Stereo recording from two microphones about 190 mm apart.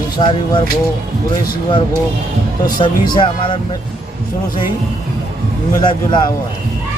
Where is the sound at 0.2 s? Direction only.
25° left (ahead or behind).